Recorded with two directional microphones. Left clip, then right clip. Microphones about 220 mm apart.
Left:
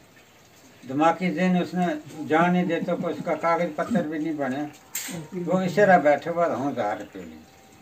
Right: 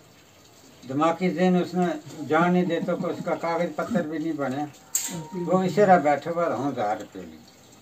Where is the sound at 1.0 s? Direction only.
10° left (ahead or behind).